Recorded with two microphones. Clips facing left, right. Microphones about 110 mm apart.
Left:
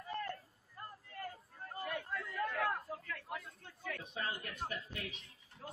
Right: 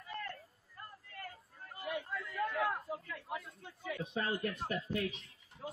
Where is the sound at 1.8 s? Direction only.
10° right (ahead or behind).